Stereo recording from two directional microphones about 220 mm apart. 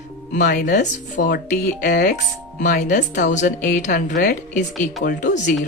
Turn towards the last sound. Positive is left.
turn(degrees=35)  # may be behind; listen again after turning